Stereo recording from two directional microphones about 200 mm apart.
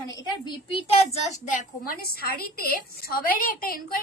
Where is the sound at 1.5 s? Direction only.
45° left (ahead or behind).